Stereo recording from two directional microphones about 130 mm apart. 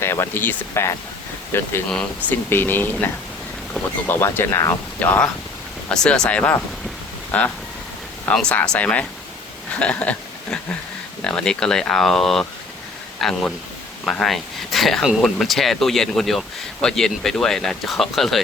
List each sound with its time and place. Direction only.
0.0 s speech: 20° left (ahead or behind)
4.0 s speech: 15° left (ahead or behind)
4.9 s speech: 10° left (ahead or behind)
9.7 s a sound: 10° left (ahead or behind)
11.2 s speech: 5° left (ahead or behind)